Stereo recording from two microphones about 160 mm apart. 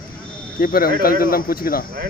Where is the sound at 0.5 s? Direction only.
60° left (ahead or behind).